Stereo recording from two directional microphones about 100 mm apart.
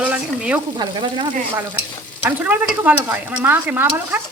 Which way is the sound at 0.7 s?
50° right (ahead or behind).